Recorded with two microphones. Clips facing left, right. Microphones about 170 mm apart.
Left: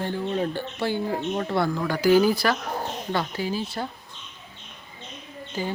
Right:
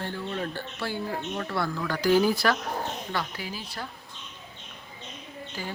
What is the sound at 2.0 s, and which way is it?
Speech, 5° left (ahead or behind).